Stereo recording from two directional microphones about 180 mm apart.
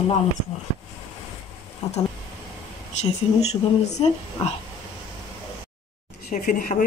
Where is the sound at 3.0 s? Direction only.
35° left (ahead or behind).